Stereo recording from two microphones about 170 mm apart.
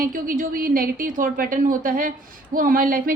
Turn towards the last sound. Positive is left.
turn(degrees=-55)  # may be behind; listen again after turning